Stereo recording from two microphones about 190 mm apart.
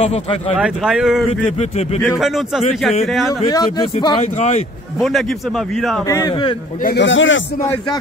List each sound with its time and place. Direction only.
0.0 s speech: 35° left (ahead or behind)
0.6 s speech: 5° right (ahead or behind)
1.4 s speech: 35° left (ahead or behind)
2.1 s speech: centre (ahead or behind)
3.4 s speech: 20° left (ahead or behind)
4.9 s a man's voice: centre (ahead or behind)
6.0 s speech: 15° left (ahead or behind)
7.0 s speech: 80° left